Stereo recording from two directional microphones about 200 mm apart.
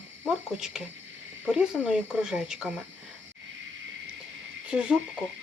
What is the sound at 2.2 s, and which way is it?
Speech, 5° right (ahead or behind).